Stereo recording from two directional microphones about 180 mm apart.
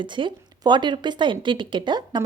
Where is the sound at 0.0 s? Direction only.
25° right (ahead or behind).